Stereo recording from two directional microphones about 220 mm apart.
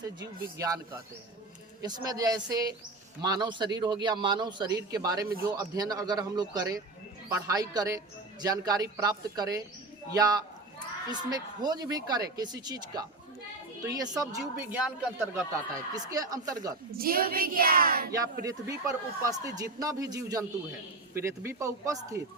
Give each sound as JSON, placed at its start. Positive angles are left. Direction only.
{"t": 0.2, "sound": "a man's voice", "side_deg": -15}
{"t": 1.8, "sound": "a man's voice", "side_deg": -15}
{"t": 16.0, "sound": "a man's voice", "side_deg": -15}
{"t": 17.0, "sound": "child singing", "side_deg": -40}
{"t": 18.1, "sound": "a man's voice", "side_deg": -15}